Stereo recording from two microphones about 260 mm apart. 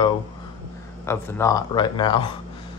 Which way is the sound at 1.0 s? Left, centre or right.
Centre.